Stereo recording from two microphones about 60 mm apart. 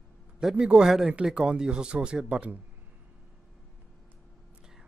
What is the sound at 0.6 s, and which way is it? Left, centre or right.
Speech, centre.